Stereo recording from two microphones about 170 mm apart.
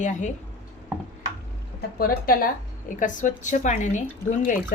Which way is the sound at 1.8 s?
60° left (ahead or behind).